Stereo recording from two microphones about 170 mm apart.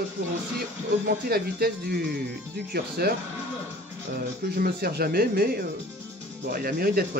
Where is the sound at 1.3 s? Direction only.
65° right (ahead or behind).